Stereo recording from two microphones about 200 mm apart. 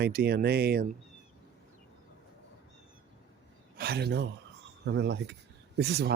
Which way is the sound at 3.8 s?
50° right (ahead or behind).